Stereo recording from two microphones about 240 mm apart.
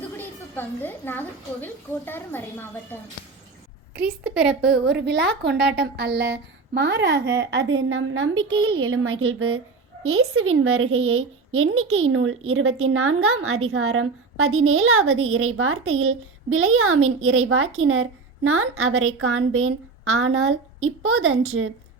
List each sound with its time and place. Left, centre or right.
0.2 s a child's voice: centre
4.4 s a woman's voice: centre
4.7 s a woman's voice: right
7.8 s a woman's voice: right
8.4 s a woman's voice: centre
8.8 s a woman's voice: right